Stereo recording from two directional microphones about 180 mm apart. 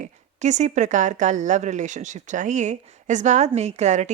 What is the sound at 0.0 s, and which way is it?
A woman's voice, 40° right (ahead or behind).